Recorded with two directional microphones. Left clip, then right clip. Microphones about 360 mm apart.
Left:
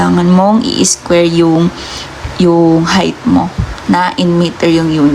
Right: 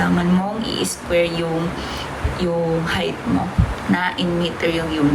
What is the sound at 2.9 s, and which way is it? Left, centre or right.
A woman's voice, centre.